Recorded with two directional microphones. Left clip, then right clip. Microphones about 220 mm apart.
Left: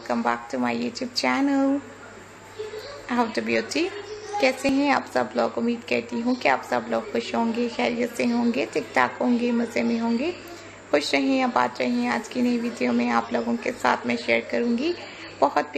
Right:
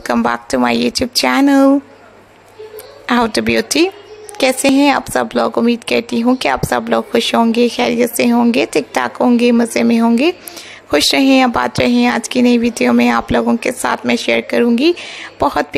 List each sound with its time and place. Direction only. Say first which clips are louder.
0.0 s a woman's voice: right 9 dB; 45° right (ahead or behind)
3.1 s a woman's voice: right 10 dB; 40° right (ahead or behind)